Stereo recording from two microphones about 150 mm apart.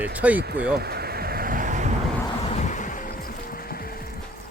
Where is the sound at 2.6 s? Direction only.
55° left (ahead or behind); by 4.2 s 80° left.